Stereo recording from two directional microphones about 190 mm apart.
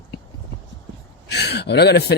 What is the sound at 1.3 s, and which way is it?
Speech, 60° left (ahead or behind).